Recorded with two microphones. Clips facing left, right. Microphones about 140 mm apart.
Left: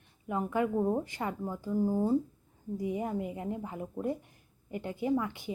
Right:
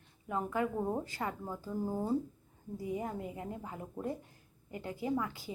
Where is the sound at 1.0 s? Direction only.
20° left (ahead or behind).